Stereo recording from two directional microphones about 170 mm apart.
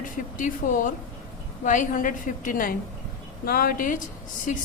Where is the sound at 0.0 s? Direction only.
50° left (ahead or behind).